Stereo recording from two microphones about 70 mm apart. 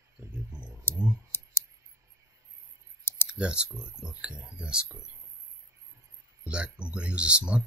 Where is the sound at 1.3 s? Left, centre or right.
Left.